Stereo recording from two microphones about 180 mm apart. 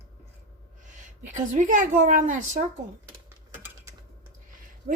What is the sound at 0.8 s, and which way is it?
A woman's voice, 45° right (ahead or behind).